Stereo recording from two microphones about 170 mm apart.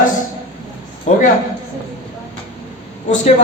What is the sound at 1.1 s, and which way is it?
Speech, 45° left (ahead or behind).